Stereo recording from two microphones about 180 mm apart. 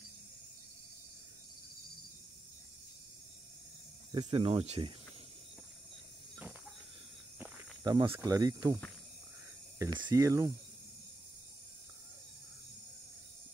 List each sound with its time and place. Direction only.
4.1 s speech: 30° right (ahead or behind)
7.3 s snake: 10° right (ahead or behind)
7.8 s speech: 25° right (ahead or behind)
9.9 s speech: 15° right (ahead or behind)